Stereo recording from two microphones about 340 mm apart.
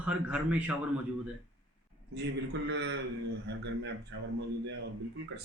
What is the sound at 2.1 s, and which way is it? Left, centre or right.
Speech, right.